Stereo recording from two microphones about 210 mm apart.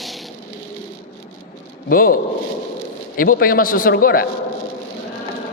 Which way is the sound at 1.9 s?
40° left (ahead or behind).